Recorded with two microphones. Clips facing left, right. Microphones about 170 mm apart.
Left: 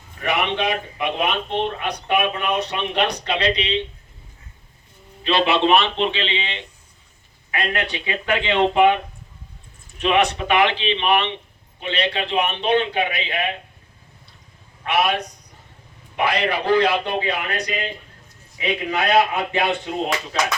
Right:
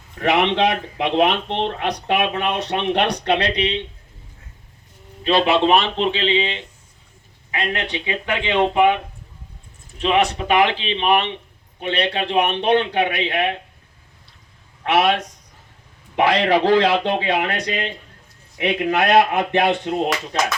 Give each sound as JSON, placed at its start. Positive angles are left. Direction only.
{"t": 0.2, "sound": "speech", "side_deg": -90}
{"t": 5.2, "sound": "a man's voice", "side_deg": -40}
{"t": 7.5, "sound": "speech", "side_deg": -25}
{"t": 10.0, "sound": "speech", "side_deg": -35}
{"t": 11.8, "sound": "a man's voice", "side_deg": -55}
{"t": 14.8, "sound": "a man's voice", "side_deg": -90}
{"t": 16.1, "sound": "a man's voice", "side_deg": -90}
{"t": 17.2, "sound": "a man's voice", "side_deg": -80}